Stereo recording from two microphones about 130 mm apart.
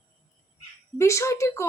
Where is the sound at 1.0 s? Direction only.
20° left (ahead or behind).